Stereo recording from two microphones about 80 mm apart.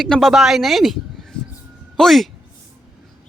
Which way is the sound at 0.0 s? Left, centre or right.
Centre.